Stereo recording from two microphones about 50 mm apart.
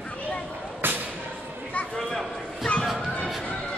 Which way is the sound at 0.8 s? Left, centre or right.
Right.